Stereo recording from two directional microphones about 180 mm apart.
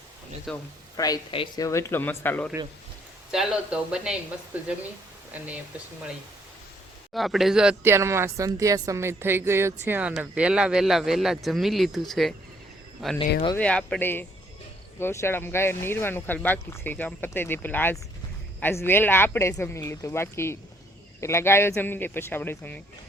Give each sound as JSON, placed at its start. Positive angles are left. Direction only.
{"t": 0.5, "sound": "speech", "side_deg": 0}
{"t": 0.9, "sound": "speech", "side_deg": 20}
{"t": 3.3, "sound": "speech", "side_deg": -5}
{"t": 7.1, "sound": "speech", "side_deg": 0}